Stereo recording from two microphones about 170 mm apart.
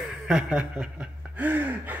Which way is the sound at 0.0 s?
5° right (ahead or behind).